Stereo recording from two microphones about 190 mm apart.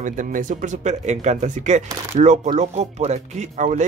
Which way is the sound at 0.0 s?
45° right (ahead or behind).